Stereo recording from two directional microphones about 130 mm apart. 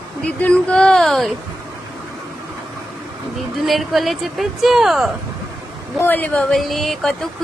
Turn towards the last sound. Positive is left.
turn(degrees=0)  # may be behind; listen again after turning